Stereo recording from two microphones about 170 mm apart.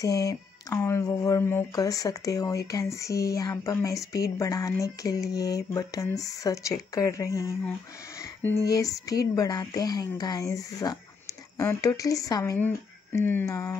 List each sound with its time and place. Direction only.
0.0 s speech: 20° left (ahead or behind)
8.5 s speech: 20° left (ahead or behind)